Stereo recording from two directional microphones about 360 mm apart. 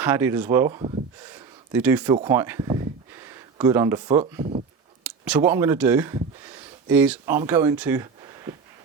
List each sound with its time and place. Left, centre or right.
0.0 s speech: centre